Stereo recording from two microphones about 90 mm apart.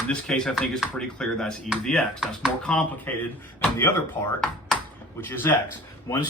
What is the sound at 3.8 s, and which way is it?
A man's voice, 25° left (ahead or behind).